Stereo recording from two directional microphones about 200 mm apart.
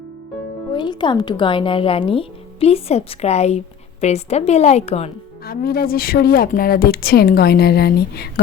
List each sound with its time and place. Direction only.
0.7 s a woman's voice: 20° left (ahead or behind)
5.5 s a woman's voice: 50° left (ahead or behind)